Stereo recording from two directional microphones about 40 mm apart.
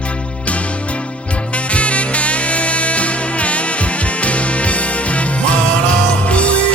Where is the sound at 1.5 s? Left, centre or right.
Left.